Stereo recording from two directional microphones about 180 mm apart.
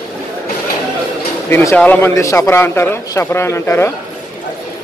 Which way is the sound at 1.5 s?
15° left (ahead or behind).